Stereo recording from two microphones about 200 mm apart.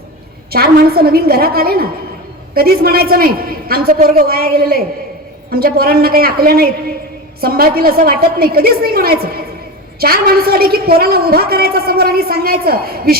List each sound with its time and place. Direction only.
0.5 s a woman's voice: 50° right (ahead or behind)